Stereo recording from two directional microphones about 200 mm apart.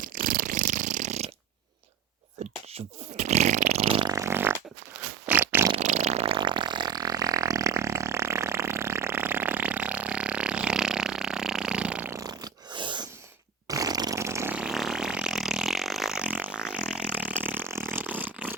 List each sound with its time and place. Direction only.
0.0 s purr: 45° right (ahead or behind)
2.7 s fart: 35° right (ahead or behind); by 4.5 s 10° right (ahead or behind)
5.2 s a sound: 10° right (ahead or behind)
5.7 s fart: 35° right (ahead or behind); by 18.3 s 10° right (ahead or behind)